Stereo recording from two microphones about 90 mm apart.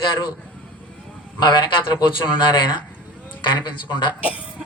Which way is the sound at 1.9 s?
55° left (ahead or behind).